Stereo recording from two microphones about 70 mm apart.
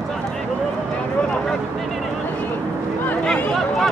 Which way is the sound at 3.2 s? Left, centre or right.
Centre.